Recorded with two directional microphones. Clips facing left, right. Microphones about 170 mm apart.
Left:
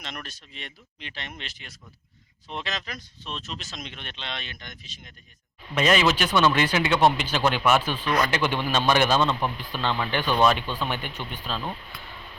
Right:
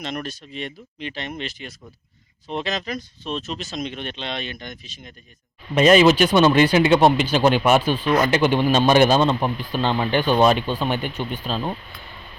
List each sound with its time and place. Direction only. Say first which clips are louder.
0.0 s speech: right 10 dB; 40° right (ahead or behind)
5.7 s speech: right 8 dB; 20° right (ahead or behind)
8.0 s speech: right 5 dB; 25° right (ahead or behind)
8.4 s speech: right 7 dB; 40° right (ahead or behind)